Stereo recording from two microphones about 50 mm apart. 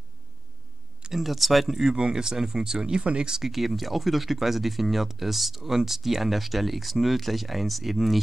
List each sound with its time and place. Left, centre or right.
1.1 s speech: centre